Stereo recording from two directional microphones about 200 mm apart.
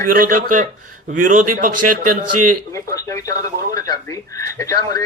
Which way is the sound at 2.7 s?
15° left (ahead or behind).